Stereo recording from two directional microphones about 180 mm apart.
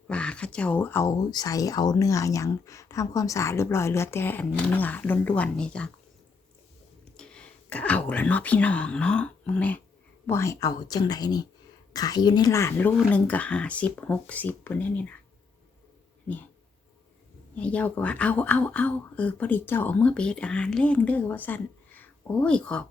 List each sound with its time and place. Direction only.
0.1 s speech: 5° left (ahead or behind)
7.2 s speech: 5° left (ahead or behind)
17.6 s speech: 5° left (ahead or behind)